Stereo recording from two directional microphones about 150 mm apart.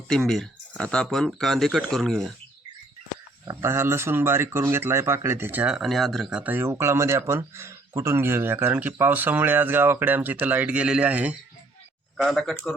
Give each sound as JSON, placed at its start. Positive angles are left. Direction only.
{"t": 0.1, "sound": "speech", "side_deg": 0}
{"t": 3.4, "sound": "speech", "side_deg": -20}
{"t": 6.4, "sound": "speech", "side_deg": -15}
{"t": 12.1, "sound": "speech", "side_deg": 0}